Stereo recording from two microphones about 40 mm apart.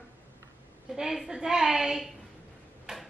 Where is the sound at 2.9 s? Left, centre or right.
Centre.